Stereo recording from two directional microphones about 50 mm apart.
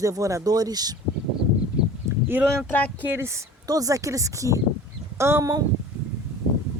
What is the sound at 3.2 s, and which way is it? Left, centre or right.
Speech, right.